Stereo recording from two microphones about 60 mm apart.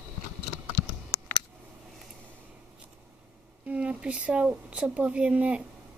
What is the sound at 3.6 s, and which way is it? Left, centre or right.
A woman's voice, right.